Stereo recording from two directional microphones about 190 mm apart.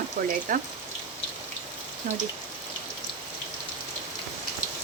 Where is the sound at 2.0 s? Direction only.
45° right (ahead or behind).